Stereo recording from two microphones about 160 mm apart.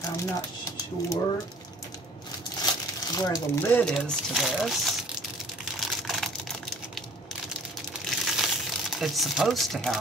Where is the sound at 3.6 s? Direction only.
10° left (ahead or behind).